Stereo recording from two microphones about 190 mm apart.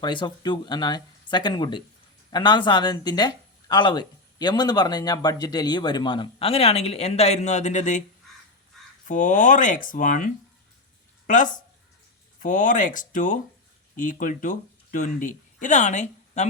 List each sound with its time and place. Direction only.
0.0 s speech: 25° left (ahead or behind); by 8.0 s 40° left (ahead or behind)
9.0 s speech: 40° left (ahead or behind)
11.3 s speech: 40° left (ahead or behind)